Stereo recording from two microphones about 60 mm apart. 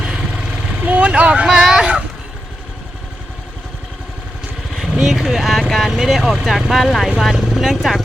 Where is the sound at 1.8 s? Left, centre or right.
Centre.